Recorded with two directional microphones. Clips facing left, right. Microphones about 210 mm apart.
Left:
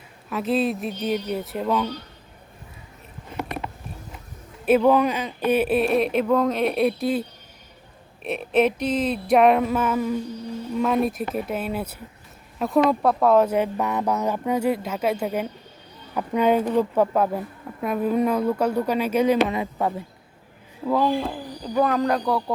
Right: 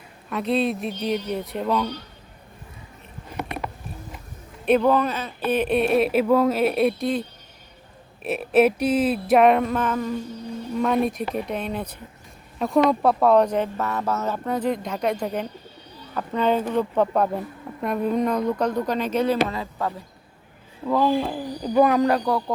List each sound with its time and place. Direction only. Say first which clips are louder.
0.3 s speech: even; centre (ahead or behind)
4.6 s speech: left 1 dB; 5° left (ahead or behind)
19.5 s speech: left 3 dB; 20° left (ahead or behind)
20.8 s speech: right 1 dB; centre (ahead or behind)